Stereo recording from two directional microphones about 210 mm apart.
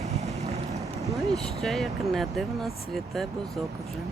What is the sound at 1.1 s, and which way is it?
Speech, centre (ahead or behind).